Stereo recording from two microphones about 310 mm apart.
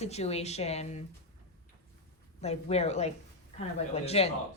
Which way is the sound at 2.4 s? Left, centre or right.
Centre.